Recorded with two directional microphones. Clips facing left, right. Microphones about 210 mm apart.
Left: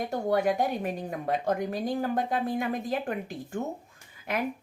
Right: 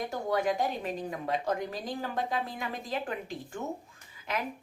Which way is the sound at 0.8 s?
50° left (ahead or behind).